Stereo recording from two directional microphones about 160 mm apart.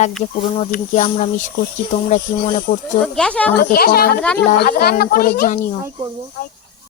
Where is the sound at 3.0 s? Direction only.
5° left (ahead or behind).